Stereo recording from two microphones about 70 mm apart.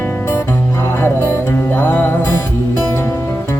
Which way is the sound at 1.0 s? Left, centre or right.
Left.